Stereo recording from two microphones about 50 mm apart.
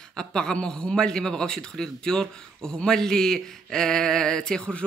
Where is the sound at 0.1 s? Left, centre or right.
Centre.